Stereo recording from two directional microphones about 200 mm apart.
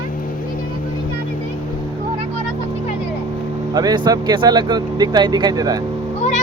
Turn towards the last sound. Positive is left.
turn(degrees=35)  # may be behind; listen again after turning